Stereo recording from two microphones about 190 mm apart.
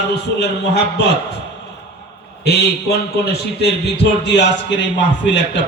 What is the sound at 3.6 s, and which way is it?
A man's voice, 65° left (ahead or behind).